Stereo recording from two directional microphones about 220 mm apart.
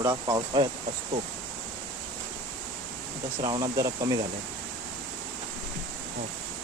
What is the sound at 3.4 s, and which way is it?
Speech, 15° right (ahead or behind).